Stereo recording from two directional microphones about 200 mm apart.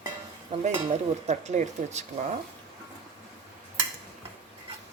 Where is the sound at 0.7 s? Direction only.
35° right (ahead or behind).